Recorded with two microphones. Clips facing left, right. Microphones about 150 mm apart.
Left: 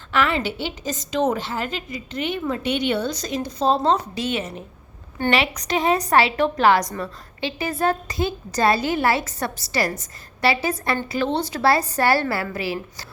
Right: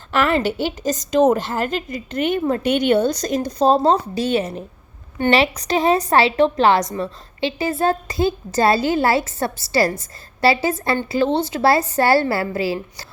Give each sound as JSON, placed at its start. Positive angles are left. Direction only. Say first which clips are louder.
{"t": 0.1, "sound": "a woman's voice", "louder": "right 4 dB", "side_deg": -45}